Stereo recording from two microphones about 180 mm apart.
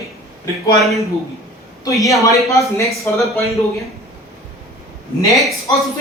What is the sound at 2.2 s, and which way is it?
A woman's voice, 15° left (ahead or behind).